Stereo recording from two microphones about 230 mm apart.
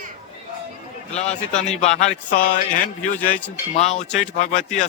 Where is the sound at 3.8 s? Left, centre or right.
Left.